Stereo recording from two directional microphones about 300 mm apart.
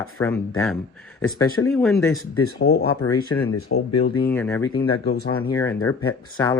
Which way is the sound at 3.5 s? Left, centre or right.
Left.